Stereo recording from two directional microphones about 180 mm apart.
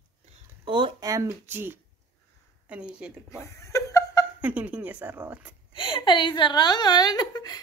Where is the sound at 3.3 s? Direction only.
15° left (ahead or behind).